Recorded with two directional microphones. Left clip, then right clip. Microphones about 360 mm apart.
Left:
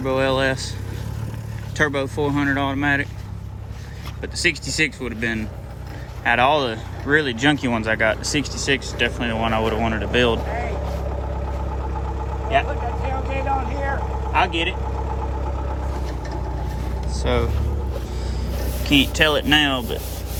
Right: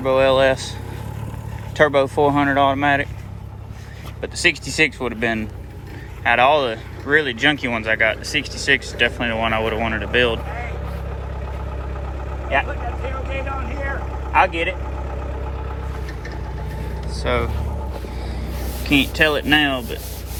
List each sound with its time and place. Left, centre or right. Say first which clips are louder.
0.0 s speech: right 5 dB; centre
1.7 s speech: right 6 dB; centre
4.2 s speech: right 3 dB; centre
12.6 s vehicle: left 2 dB; left
17.2 s speech: right 1 dB; centre
18.8 s speech: right 1 dB; centre